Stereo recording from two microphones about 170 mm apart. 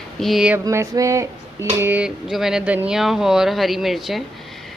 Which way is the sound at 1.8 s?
10° right (ahead or behind).